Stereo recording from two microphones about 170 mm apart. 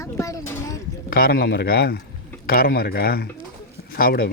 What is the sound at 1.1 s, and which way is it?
A man's voice, 65° left (ahead or behind).